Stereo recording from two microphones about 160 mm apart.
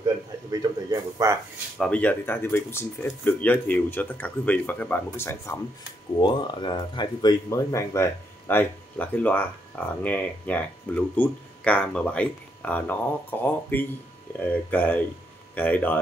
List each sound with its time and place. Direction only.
0.5 s a man's voice: 25° right (ahead or behind)
1.8 s speech: 10° left (ahead or behind)
6.1 s speech: 30° left (ahead or behind); by 16.0 s 10° left (ahead or behind)